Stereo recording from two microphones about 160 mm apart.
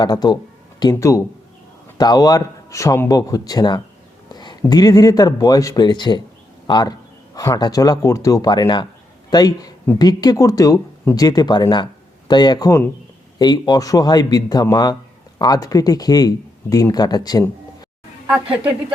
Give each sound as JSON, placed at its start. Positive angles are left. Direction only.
{"t": 0.0, "sound": "speech", "side_deg": 25}